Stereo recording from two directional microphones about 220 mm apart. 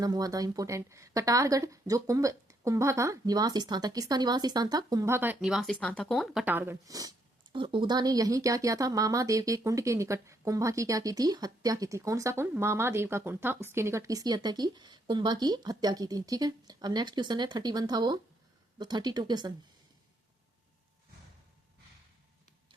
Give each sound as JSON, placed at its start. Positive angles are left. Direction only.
{"t": 0.0, "sound": "speech", "side_deg": -15}